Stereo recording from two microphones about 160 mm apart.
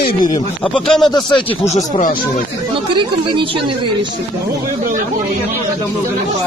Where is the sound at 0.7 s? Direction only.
5° left (ahead or behind).